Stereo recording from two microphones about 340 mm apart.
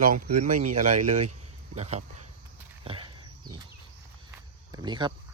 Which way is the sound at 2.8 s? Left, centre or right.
Centre.